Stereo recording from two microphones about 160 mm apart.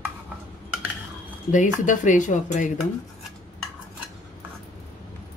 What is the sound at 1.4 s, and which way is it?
Speech, 50° left (ahead or behind).